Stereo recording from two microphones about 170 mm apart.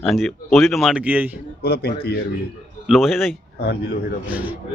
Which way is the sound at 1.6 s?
65° left (ahead or behind).